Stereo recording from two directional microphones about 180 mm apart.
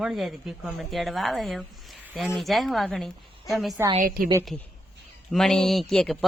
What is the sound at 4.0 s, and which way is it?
Speech, 55° right (ahead or behind).